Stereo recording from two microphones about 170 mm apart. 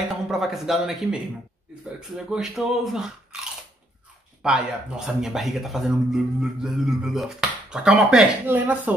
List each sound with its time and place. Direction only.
0.1 s speech: centre (ahead or behind)
4.4 s speech: 5° right (ahead or behind)